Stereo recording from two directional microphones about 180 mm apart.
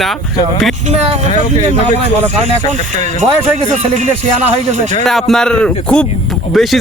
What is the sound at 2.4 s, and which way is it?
Speech, 40° right (ahead or behind).